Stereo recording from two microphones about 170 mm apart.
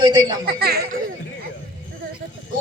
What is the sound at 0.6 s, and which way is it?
Speech, 70° right (ahead or behind).